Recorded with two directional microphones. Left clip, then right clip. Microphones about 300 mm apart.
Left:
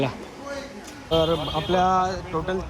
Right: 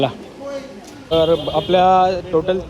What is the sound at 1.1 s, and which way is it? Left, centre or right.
Speech, right.